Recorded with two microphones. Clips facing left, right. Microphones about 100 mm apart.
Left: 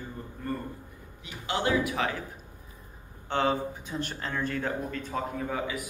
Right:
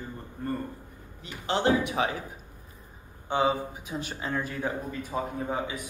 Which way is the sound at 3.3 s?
10° right (ahead or behind).